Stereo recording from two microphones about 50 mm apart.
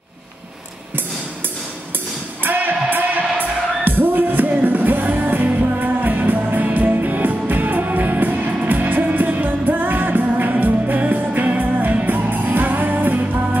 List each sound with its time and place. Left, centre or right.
2.4 s music: right